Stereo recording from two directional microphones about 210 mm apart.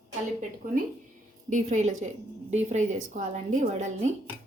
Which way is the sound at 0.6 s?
35° right (ahead or behind).